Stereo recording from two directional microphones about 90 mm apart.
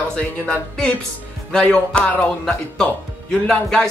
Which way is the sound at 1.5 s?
10° left (ahead or behind).